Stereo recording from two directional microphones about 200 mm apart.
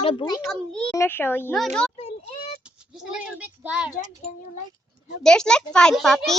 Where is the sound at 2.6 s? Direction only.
5° right (ahead or behind).